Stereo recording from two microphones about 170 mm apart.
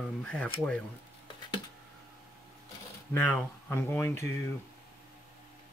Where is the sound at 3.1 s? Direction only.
10° left (ahead or behind).